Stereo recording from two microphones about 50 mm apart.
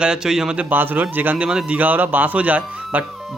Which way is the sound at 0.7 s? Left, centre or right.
Right.